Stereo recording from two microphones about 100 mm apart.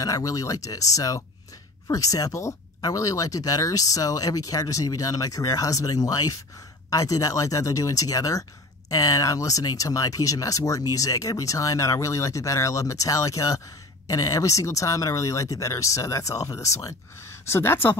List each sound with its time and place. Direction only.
0.0 s speech: 35° left (ahead or behind)